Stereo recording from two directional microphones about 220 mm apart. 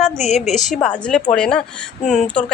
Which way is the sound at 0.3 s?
30° left (ahead or behind).